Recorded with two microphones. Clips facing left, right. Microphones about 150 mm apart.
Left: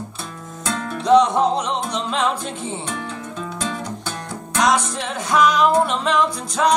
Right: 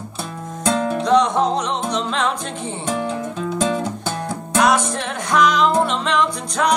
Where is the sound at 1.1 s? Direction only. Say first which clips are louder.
Left 3 dB; 5° left (ahead or behind).